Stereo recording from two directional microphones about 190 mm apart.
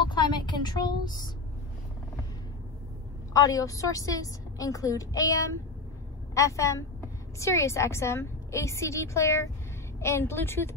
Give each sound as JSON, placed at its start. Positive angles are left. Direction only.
{"t": 0.1, "sound": "a woman's voice", "side_deg": 25}
{"t": 3.3, "sound": "a woman's voice", "side_deg": 20}